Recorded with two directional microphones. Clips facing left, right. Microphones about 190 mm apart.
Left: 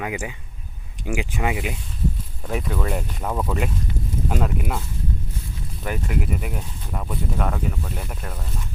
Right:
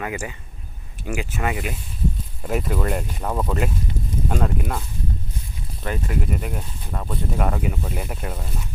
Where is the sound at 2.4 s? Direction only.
5° right (ahead or behind).